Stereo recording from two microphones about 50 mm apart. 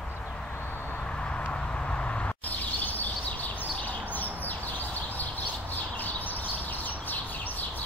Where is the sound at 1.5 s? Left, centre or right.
Left.